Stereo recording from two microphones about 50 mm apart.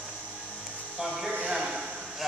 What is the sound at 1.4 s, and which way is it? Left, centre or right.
Speech, centre.